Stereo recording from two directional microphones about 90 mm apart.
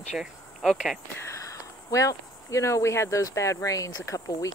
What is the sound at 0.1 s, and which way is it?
Cricket, centre (ahead or behind).